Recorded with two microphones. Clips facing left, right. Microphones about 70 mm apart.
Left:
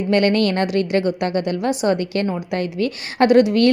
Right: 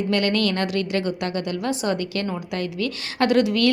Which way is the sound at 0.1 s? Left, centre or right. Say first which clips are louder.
Left 7 dB; left.